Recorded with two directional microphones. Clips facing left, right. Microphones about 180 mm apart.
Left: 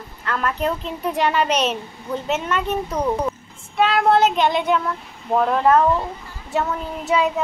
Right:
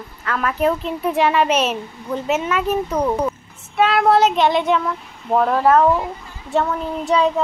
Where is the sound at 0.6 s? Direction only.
Centre (ahead or behind).